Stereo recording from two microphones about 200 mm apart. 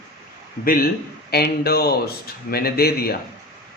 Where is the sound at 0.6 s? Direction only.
45° left (ahead or behind).